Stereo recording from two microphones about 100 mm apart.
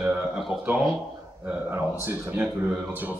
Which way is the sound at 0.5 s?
55° left (ahead or behind).